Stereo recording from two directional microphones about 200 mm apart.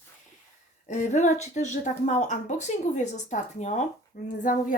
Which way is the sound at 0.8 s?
35° left (ahead or behind).